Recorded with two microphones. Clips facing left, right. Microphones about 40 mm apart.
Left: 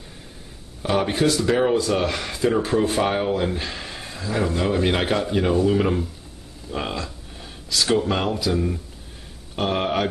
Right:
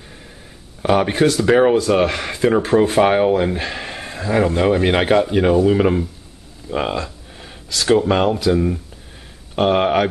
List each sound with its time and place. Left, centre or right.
0.8 s speech: right
1.2 s speech: right; by 6.0 s centre
6.7 s a sound: right
7.7 s speech: right
8.0 s speech: centre
9.6 s speech: right